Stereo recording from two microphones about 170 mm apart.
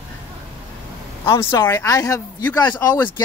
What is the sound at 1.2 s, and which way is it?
Speech, 15° left (ahead or behind).